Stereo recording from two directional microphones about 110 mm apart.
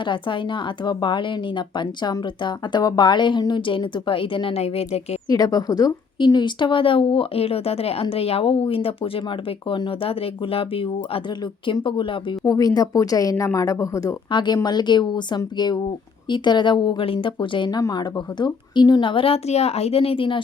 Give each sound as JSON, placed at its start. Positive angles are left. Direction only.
{"t": 0.0, "sound": "speech", "side_deg": 45}
{"t": 5.3, "sound": "speech", "side_deg": 35}
{"t": 12.5, "sound": "a woman's voice", "side_deg": 35}
{"t": 14.3, "sound": "a woman's voice", "side_deg": 45}